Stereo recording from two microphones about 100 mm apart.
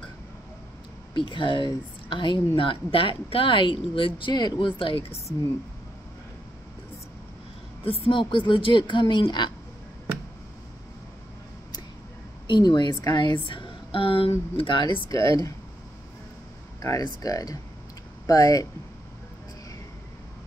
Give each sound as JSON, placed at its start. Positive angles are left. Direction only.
{"t": 1.1, "sound": "a woman's voice", "side_deg": 55}
{"t": 7.8, "sound": "a woman's voice", "side_deg": 70}
{"t": 12.4, "sound": "speech", "side_deg": 50}
{"t": 14.6, "sound": "a woman's voice", "side_deg": 55}
{"t": 15.0, "sound": "speech", "side_deg": 35}
{"t": 16.8, "sound": "speech", "side_deg": 35}